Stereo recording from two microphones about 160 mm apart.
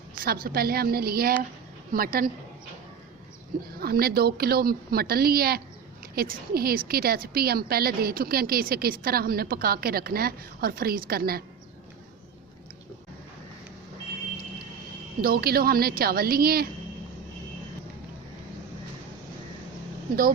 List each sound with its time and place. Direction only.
0.2 s a woman's voice: 70° right (ahead or behind)
3.8 s a woman's voice: 70° right (ahead or behind)
15.2 s a woman's voice: 70° right (ahead or behind)